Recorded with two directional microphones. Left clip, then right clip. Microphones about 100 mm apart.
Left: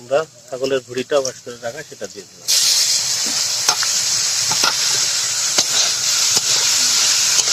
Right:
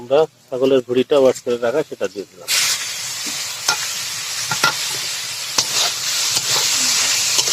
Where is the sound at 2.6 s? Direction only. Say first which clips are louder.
Left 6 dB; 30° left (ahead or behind).